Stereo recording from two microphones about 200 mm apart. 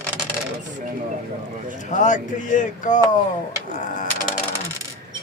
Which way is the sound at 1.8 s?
40° left (ahead or behind).